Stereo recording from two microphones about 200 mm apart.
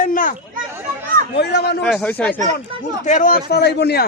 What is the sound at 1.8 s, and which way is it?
Speech, 5° left (ahead or behind).